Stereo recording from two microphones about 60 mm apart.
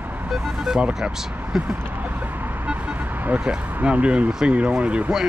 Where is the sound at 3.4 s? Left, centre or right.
Centre.